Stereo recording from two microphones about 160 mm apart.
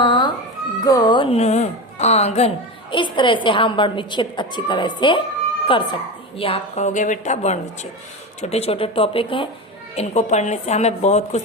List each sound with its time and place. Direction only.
0.0 s cat: 30° left (ahead or behind)
0.9 s speech: 25° left (ahead or behind); by 2.5 s 40° left (ahead or behind)
2.9 s a woman's voice: 30° left (ahead or behind)